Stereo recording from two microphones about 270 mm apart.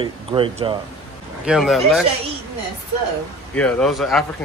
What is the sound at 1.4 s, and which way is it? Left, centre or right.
Speech, centre.